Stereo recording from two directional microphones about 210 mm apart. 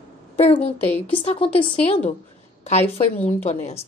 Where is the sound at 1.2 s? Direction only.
25° left (ahead or behind).